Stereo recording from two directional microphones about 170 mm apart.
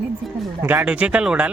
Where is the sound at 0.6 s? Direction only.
10° right (ahead or behind).